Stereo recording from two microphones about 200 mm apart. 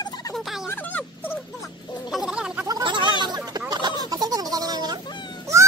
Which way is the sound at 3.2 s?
20° right (ahead or behind).